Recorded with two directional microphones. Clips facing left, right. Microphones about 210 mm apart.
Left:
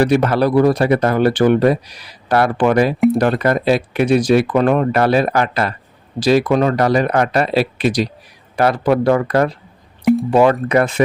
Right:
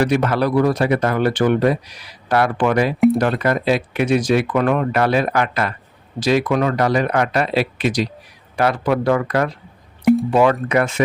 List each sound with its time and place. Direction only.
0.0 s speech: 35° left (ahead or behind)
10.0 s drip: centre (ahead or behind)
10.3 s speech: 35° left (ahead or behind)